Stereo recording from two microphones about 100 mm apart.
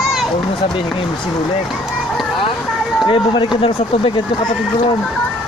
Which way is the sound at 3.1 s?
55° left (ahead or behind).